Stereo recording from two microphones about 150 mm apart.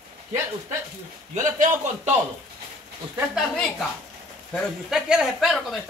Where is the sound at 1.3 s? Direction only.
55° right (ahead or behind).